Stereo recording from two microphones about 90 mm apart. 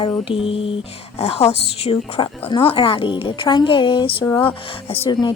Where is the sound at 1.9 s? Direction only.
70° left (ahead or behind).